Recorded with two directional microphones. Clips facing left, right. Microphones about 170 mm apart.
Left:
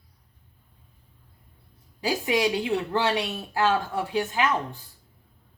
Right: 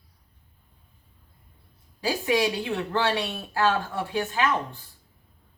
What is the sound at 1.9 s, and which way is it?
A woman's voice, 15° left (ahead or behind).